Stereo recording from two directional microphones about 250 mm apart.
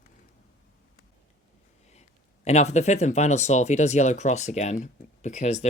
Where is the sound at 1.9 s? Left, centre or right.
Left.